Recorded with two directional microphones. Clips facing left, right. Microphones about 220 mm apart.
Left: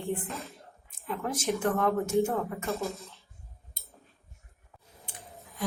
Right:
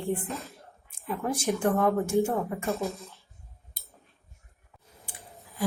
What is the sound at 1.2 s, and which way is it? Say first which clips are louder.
Speech: right 2 dB; 10° right (ahead or behind).